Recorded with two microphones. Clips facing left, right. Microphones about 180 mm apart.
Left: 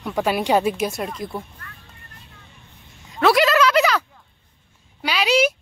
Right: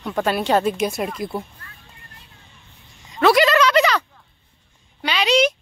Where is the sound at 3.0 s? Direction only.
Centre (ahead or behind).